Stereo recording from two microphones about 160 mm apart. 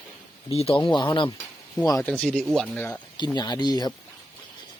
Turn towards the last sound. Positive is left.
turn(degrees=25)  # may be behind; listen again after turning